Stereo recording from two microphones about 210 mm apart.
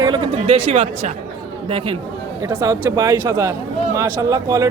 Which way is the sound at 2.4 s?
15° right (ahead or behind).